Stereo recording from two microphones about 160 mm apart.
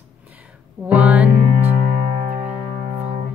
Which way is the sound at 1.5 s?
45° right (ahead or behind).